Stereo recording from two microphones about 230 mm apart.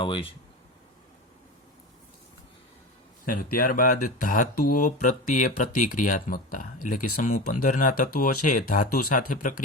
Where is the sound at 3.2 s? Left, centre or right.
Left.